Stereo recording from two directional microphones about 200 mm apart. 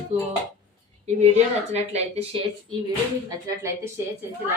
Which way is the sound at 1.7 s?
30° right (ahead or behind).